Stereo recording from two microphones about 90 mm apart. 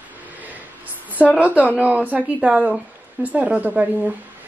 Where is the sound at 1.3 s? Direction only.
15° right (ahead or behind).